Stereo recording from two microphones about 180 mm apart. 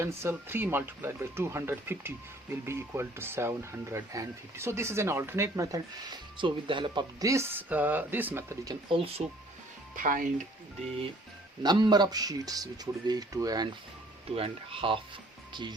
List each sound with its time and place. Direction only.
0.0 s speech: 15° right (ahead or behind)
8.9 s speech: 30° right (ahead or behind)
9.9 s speech: 50° right (ahead or behind)
11.6 s speech: 25° right (ahead or behind)